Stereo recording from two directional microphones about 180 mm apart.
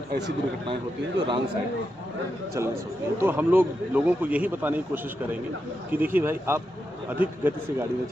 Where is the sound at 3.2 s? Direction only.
10° right (ahead or behind).